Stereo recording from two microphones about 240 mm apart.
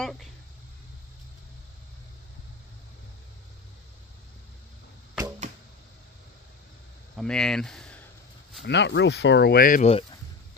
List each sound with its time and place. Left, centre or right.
0.0 s speech: centre
7.2 s speech: centre
8.6 s speech: left